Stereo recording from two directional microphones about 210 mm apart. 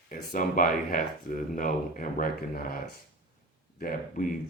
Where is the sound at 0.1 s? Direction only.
40° left (ahead or behind).